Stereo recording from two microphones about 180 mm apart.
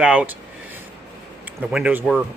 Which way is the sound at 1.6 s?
5° right (ahead or behind).